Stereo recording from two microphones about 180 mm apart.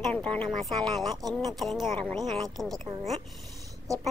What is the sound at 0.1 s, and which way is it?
Speech, 5° left (ahead or behind).